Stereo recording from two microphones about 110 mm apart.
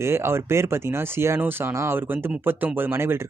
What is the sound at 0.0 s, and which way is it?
Speech, 20° right (ahead or behind).